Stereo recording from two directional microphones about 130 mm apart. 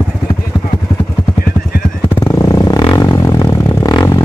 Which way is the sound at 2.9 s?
30° left (ahead or behind).